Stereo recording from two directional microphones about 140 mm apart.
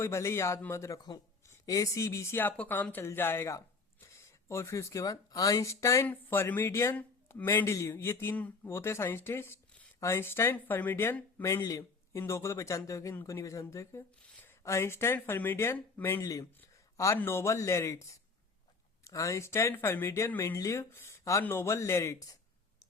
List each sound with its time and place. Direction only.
0.0 s speech: 20° left (ahead or behind)